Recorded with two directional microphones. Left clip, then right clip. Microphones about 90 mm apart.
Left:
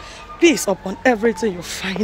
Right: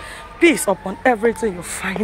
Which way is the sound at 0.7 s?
80° left.